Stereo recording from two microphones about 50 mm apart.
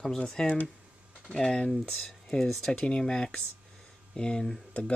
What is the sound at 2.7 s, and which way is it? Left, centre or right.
Speech, centre.